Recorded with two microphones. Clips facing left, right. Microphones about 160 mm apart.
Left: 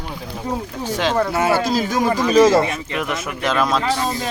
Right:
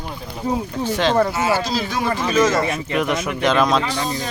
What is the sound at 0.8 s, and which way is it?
Speech, 10° left (ahead or behind).